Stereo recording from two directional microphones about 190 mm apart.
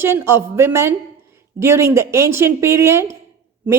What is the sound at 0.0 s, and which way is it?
A woman's voice, 15° right (ahead or behind).